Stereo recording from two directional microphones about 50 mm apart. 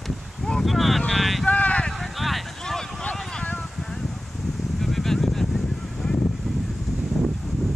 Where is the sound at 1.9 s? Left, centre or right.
Centre.